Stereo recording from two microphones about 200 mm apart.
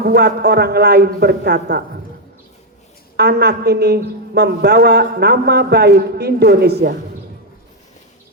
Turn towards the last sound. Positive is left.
turn(degrees=-55)  # may be behind; listen again after turning